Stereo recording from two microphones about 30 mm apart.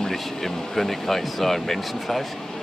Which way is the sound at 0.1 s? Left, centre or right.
Centre.